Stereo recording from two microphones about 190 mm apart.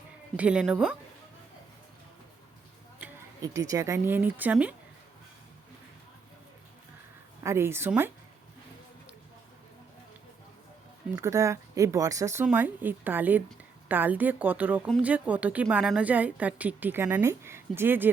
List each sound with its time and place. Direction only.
0.3 s speech: 5° right (ahead or behind)
3.4 s a woman's voice: 20° right (ahead or behind)
7.4 s a woman's voice: 15° right (ahead or behind)
11.1 s a woman's voice: 15° right (ahead or behind)